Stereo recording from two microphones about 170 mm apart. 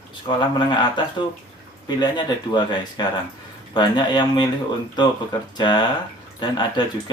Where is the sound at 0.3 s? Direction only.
25° left (ahead or behind).